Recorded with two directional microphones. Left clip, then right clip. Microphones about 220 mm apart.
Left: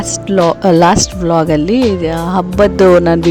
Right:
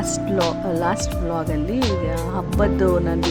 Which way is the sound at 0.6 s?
45° left (ahead or behind).